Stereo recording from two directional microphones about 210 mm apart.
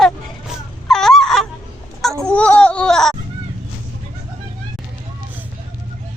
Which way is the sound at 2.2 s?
5° left (ahead or behind).